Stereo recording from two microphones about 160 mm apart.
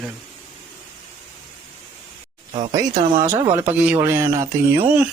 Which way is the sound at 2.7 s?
20° right (ahead or behind).